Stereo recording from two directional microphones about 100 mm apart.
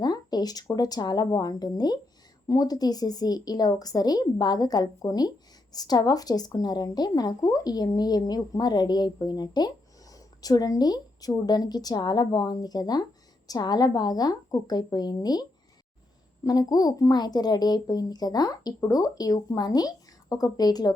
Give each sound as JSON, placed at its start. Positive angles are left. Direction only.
{"t": 0.0, "sound": "speech", "side_deg": 45}